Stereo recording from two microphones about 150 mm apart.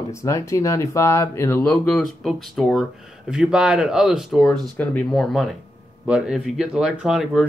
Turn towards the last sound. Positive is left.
turn(degrees=-5)  # may be behind; listen again after turning